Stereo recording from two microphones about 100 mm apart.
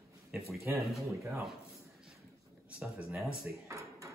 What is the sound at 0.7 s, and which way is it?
Speech, 20° right (ahead or behind).